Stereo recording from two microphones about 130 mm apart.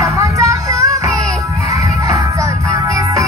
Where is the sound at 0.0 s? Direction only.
25° right (ahead or behind).